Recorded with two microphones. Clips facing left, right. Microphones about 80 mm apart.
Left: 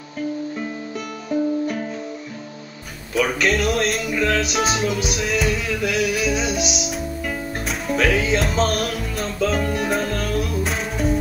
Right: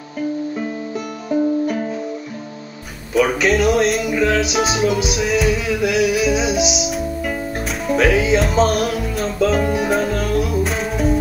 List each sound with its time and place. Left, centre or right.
1.3 s music: centre
3.2 s music: centre